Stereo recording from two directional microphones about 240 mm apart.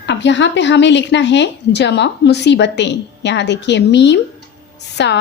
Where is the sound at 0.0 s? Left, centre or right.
Left.